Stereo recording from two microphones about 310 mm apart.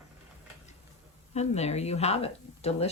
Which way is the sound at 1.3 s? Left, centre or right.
Left.